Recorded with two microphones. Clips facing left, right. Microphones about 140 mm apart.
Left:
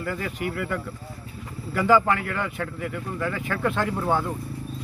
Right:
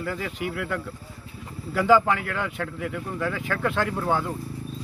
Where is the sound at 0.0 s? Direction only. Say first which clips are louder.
Left 1 dB; centre (ahead or behind).